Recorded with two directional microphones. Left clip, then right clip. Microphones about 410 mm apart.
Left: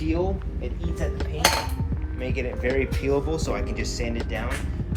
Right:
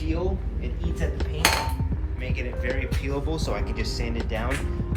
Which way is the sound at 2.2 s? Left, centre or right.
Centre.